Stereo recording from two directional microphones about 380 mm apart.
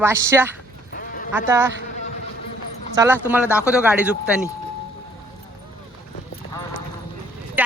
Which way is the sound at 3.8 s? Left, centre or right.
Centre.